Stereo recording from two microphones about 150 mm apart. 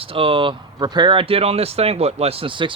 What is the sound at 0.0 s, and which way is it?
Speech, 35° right (ahead or behind).